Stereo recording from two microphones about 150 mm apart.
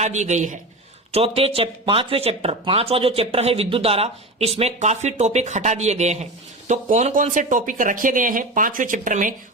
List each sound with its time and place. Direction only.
0.0 s speech: 50° right (ahead or behind)
1.1 s speech: 40° right (ahead or behind); by 9.3 s 60° right (ahead or behind)